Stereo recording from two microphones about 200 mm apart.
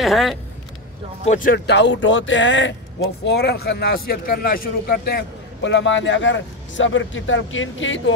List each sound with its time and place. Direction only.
0.0 s speech: centre (ahead or behind)
1.2 s speech: 40° left (ahead or behind)
1.7 s speech: 65° left (ahead or behind)
3.3 s a man's voice: 55° left (ahead or behind); by 8.0 s 70° left (ahead or behind)